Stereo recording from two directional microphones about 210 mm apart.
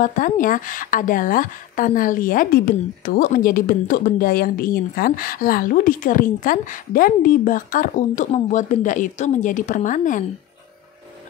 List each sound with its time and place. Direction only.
0.0 s a woman's voice: 40° left (ahead or behind)